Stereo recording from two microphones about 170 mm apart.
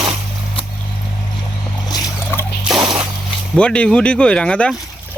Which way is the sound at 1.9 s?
20° left (ahead or behind).